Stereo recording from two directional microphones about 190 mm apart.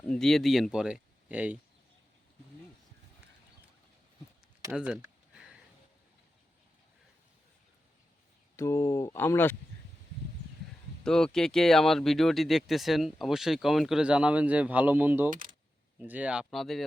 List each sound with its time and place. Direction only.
0.1 s speech: centre (ahead or behind)
4.7 s a sound: 5° right (ahead or behind)
8.5 s speech: 15° left (ahead or behind)
11.0 s speech: 5° left (ahead or behind)
15.3 s speech: 45° right (ahead or behind)
16.0 s speech: 10° right (ahead or behind)